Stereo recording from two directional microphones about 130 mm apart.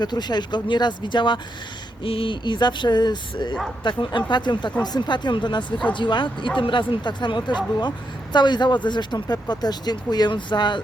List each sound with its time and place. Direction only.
0.0 s speech: 35° left (ahead or behind)